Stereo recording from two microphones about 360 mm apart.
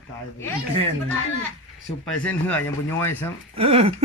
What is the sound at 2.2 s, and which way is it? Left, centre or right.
Speech, centre.